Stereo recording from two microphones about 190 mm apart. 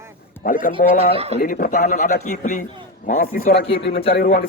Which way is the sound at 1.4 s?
50° left (ahead or behind).